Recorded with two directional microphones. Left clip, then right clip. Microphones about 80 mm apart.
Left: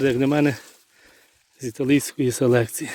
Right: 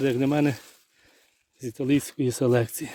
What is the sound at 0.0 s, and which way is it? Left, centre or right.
Speech, right.